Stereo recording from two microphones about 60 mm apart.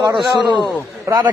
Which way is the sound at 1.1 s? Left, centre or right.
Right.